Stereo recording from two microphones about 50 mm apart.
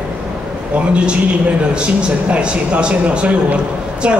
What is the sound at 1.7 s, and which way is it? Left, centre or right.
A woman's voice, right.